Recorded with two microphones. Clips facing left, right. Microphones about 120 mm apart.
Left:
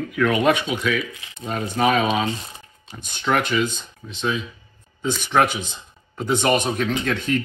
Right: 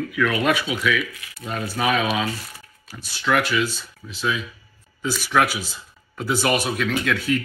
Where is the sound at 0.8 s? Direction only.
30° left (ahead or behind).